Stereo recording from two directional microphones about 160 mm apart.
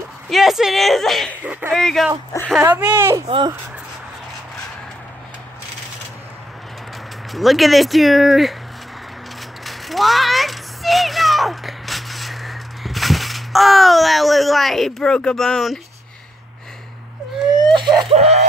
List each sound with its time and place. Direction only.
0.3 s speech: centre (ahead or behind)
1.4 s speech: 10° right (ahead or behind)
1.8 s speech: centre (ahead or behind)
2.6 s speech: 10° right (ahead or behind)
3.3 s speech: 30° right (ahead or behind)
7.3 s speech: centre (ahead or behind)
9.7 s a sound: centre (ahead or behind)
17.7 s a sound: 25° right (ahead or behind)
18.1 s speech: 40° right (ahead or behind)